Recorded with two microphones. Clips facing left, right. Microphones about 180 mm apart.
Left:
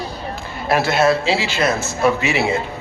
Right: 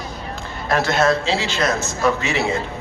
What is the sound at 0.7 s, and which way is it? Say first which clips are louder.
A man's voice: left 2 dB; 10° left (ahead or behind).